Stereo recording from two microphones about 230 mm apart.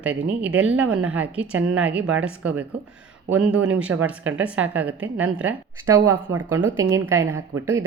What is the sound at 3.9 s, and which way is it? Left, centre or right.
Speech, right.